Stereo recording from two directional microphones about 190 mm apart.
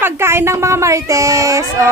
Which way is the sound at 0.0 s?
15° right (ahead or behind).